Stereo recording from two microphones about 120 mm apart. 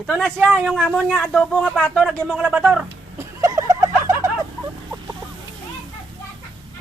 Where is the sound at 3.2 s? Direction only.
30° right (ahead or behind).